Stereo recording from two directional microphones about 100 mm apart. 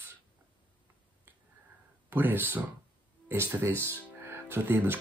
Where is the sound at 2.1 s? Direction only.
20° right (ahead or behind).